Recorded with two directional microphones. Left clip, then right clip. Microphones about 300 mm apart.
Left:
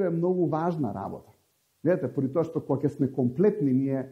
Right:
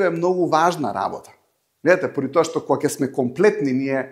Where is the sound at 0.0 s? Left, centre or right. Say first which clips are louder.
Right 7 dB; centre.